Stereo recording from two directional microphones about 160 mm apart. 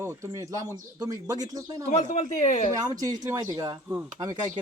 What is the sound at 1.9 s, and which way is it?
Speech, 45° left (ahead or behind).